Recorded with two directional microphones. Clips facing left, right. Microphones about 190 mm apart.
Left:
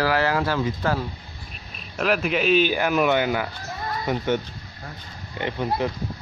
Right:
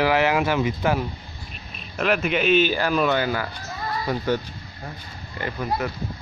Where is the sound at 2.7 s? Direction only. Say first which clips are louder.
Left 1 dB; 15° left (ahead or behind).